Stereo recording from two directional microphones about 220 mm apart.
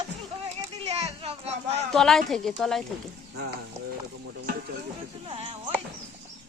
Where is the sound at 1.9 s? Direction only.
Centre (ahead or behind).